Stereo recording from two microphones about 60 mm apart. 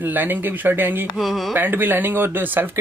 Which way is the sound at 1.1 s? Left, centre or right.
Centre.